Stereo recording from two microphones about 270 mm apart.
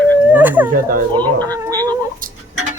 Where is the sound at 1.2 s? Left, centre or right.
Centre.